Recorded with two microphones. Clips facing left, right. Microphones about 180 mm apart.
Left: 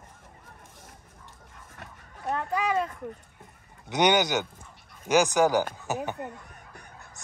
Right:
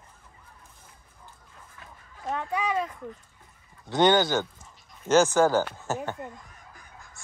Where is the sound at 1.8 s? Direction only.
65° left (ahead or behind).